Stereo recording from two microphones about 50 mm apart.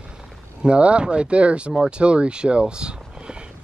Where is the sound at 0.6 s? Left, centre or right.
Right.